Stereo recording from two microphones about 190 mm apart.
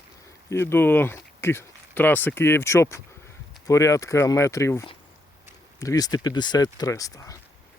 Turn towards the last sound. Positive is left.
turn(degrees=15)  # may be behind; listen again after turning